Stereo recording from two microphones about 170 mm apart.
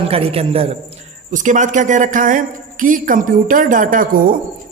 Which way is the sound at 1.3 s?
45° right (ahead or behind).